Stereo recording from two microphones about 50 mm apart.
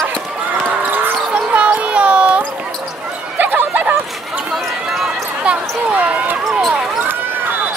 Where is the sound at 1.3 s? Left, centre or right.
Right.